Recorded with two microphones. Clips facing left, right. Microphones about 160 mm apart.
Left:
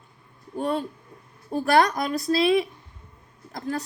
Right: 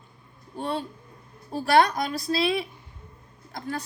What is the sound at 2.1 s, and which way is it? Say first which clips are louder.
Speech: left 6 dB; 40° left (ahead or behind).